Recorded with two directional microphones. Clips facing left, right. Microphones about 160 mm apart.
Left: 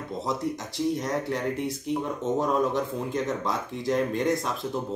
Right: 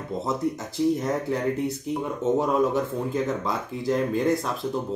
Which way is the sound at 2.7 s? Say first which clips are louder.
Right 2 dB; centre (ahead or behind).